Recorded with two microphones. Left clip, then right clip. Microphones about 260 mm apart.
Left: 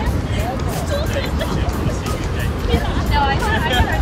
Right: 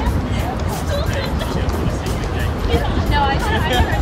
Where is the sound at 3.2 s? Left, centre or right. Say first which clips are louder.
Left 1 dB; right.